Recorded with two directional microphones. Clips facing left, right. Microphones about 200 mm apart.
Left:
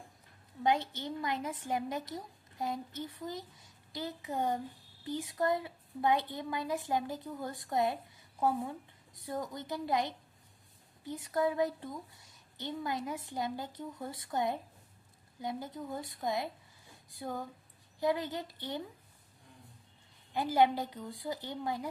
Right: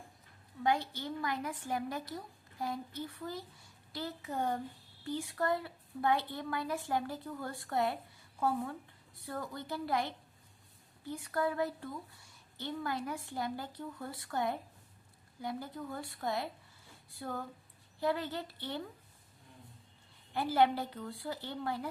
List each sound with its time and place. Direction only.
0.6 s a woman's voice: 20° left (ahead or behind)
20.3 s a woman's voice: 15° left (ahead or behind)